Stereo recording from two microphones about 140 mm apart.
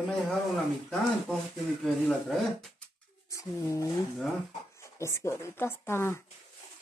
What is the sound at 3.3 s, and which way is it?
Speech, 20° left (ahead or behind).